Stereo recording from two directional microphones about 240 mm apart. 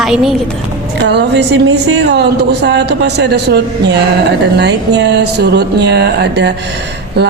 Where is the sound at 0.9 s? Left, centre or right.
Right.